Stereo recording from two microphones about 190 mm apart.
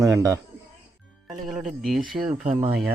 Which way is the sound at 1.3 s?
Centre (ahead or behind).